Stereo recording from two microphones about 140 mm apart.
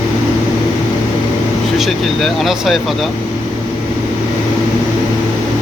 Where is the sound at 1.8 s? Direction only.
Centre (ahead or behind).